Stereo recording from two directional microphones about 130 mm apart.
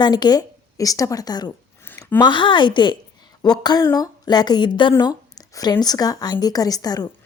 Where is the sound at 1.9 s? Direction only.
15° left (ahead or behind).